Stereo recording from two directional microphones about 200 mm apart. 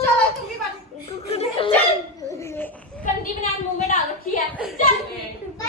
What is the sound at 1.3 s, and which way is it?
Dog, 30° left (ahead or behind).